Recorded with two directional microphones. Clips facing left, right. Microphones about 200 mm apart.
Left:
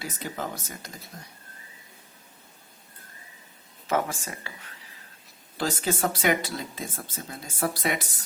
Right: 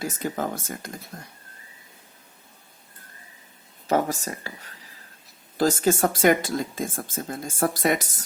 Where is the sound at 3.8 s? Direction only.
40° right (ahead or behind).